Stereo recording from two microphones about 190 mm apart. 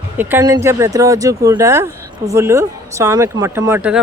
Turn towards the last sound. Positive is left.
turn(degrees=-10)  # may be behind; listen again after turning